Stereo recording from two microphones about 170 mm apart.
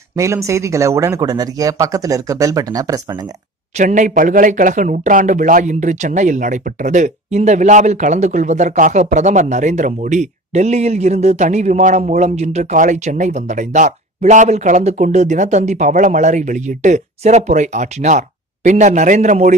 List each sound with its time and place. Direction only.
0.1 s speech: 15° right (ahead or behind)
3.7 s speech: 45° right (ahead or behind)